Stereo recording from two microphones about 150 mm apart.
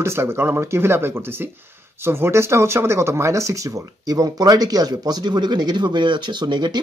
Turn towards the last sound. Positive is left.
turn(degrees=-30)  # may be behind; listen again after turning